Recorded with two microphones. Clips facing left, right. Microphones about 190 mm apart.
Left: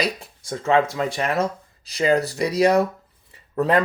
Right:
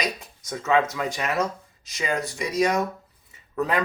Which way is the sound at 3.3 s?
35° left (ahead or behind).